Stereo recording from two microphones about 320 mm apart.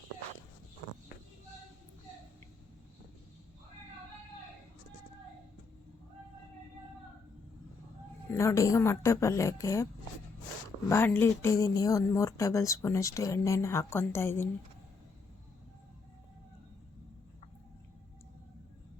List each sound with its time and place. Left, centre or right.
0.8 s a sound: centre
8.3 s speech: centre
10.8 s speech: centre